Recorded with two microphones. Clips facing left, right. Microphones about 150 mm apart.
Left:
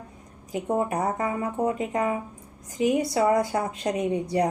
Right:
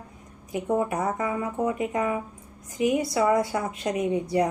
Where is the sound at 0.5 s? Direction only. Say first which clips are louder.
Even; 30° left (ahead or behind).